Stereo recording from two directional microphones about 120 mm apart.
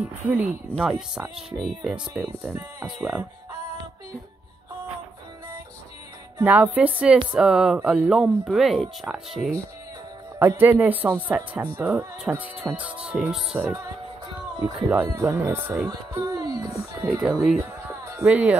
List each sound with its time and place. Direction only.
0.0 s speech: 15° right (ahead or behind)
0.7 s speech: 5° right (ahead or behind)
2.5 s speech: 15° right (ahead or behind)
6.4 s speech: 15° right (ahead or behind)
10.4 s speech: 20° right (ahead or behind)
15.9 s music: 30° right (ahead or behind)
17.2 s speech: 5° right (ahead or behind)